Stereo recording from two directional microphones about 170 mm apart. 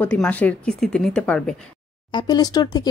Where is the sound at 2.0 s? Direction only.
25° left (ahead or behind).